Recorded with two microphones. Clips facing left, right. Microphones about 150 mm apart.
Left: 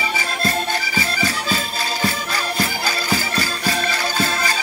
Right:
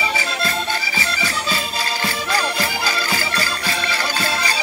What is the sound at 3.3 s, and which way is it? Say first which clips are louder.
Music: left 2 dB; 45° left (ahead or behind).